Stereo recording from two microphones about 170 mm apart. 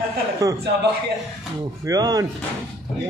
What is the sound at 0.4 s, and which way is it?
Speech, 20° right (ahead or behind).